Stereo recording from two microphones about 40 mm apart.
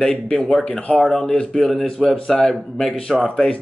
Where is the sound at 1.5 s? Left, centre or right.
Centre.